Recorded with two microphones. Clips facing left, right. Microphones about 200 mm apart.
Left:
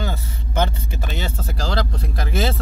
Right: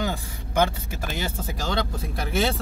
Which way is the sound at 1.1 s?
10° right (ahead or behind).